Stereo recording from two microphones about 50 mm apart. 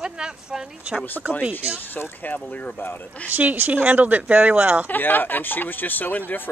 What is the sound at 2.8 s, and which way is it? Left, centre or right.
Speech, left.